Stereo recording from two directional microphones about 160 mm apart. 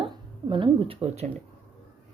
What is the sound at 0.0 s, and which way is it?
Speech, 30° right (ahead or behind).